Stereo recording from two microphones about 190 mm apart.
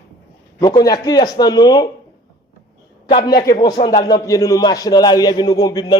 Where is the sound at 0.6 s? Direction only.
20° left (ahead or behind).